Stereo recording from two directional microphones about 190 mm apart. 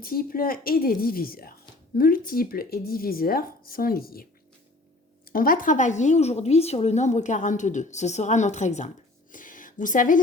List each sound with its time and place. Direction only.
0.0 s speech: 50° left (ahead or behind)
5.3 s a woman's voice: 50° left (ahead or behind)
9.3 s a sound: 45° left (ahead or behind)